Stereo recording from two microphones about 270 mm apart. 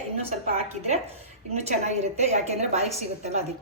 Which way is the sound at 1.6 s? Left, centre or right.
Right.